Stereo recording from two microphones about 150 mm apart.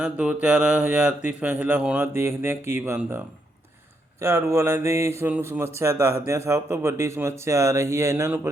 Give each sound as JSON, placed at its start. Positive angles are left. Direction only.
{"t": 0.0, "sound": "speech", "side_deg": -5}
{"t": 4.2, "sound": "speech", "side_deg": -20}